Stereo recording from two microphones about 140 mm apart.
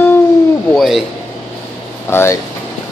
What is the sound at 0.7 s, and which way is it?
Speech, centre (ahead or behind).